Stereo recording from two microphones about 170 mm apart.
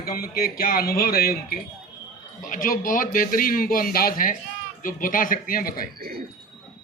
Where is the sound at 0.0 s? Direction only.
60° left (ahead or behind).